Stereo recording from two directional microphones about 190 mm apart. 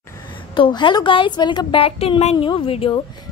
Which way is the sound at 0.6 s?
25° left (ahead or behind).